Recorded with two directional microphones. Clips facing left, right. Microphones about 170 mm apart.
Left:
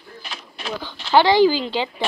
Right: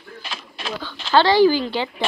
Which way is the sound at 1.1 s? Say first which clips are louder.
Even; 15° left (ahead or behind).